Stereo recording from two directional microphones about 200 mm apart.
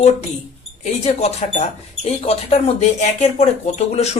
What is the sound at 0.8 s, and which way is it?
Speech, 35° left (ahead or behind).